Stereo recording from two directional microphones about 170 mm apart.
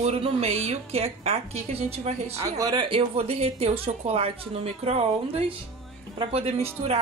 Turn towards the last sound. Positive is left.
turn(degrees=-35)  # may be behind; listen again after turning